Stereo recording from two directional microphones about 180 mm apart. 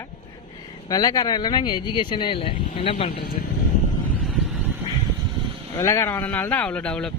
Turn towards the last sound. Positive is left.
turn(degrees=5)  # may be behind; listen again after turning